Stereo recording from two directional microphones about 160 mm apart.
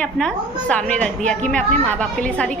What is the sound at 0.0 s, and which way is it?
A woman's voice, 5° left (ahead or behind).